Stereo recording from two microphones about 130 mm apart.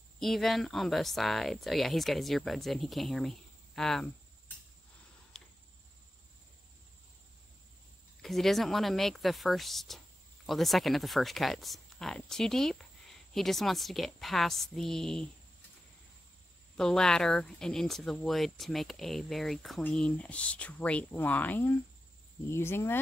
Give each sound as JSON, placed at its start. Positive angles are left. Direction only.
{"t": 0.2, "sound": "speech", "side_deg": 0}
{"t": 5.3, "sound": "a sound", "side_deg": 5}
{"t": 8.2, "sound": "speech", "side_deg": 0}
{"t": 16.7, "sound": "speech", "side_deg": 5}